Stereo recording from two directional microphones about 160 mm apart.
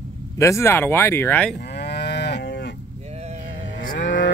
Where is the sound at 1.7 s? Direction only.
90° left.